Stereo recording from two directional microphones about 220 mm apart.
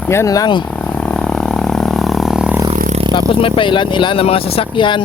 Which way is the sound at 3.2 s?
25° left (ahead or behind).